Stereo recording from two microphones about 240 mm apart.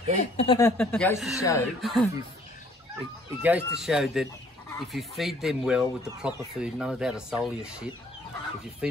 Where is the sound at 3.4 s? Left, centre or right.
Centre.